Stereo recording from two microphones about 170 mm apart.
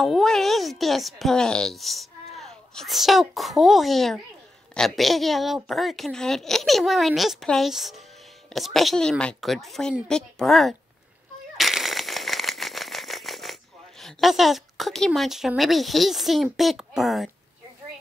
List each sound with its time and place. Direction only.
0.0 s speech: centre (ahead or behind)
11.5 s a sound: centre (ahead or behind)
16.5 s speech: centre (ahead or behind)